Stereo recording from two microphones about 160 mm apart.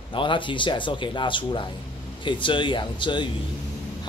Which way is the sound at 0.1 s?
30° left (ahead or behind).